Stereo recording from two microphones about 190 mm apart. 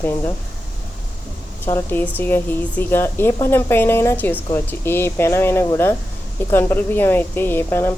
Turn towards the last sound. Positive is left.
turn(degrees=10)  # may be behind; listen again after turning